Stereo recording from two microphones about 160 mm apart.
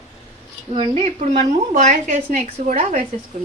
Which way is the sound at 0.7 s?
35° right (ahead or behind).